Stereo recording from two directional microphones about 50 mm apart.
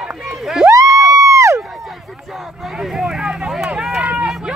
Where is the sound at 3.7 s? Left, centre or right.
Right.